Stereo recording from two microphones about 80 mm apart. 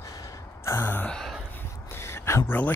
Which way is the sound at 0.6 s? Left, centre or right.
Left.